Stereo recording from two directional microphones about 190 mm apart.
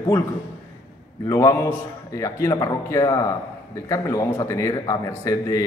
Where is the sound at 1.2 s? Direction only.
15° left (ahead or behind).